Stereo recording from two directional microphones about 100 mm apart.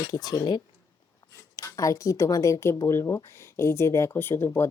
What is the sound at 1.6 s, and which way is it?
Speech, 35° left (ahead or behind).